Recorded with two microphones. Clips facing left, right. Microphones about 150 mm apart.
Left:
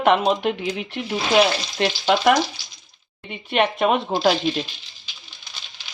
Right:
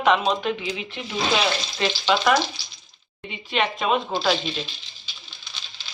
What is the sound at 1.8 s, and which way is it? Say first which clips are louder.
Frying: left 3 dB; 50° left (ahead or behind).